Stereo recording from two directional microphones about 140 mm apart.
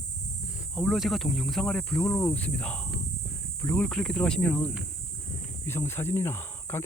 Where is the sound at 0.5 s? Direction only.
5° right (ahead or behind).